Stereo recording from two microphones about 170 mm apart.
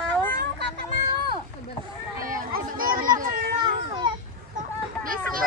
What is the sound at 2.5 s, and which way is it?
Children playing, 55° right (ahead or behind).